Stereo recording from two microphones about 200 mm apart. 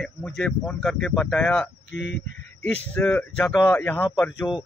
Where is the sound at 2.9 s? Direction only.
10° left (ahead or behind).